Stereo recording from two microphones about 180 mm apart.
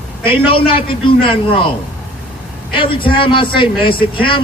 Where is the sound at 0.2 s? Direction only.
30° left (ahead or behind).